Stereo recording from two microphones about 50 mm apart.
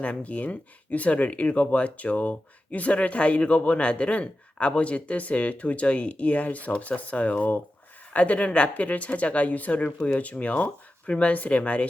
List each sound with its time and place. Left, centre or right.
0.0 s speech: left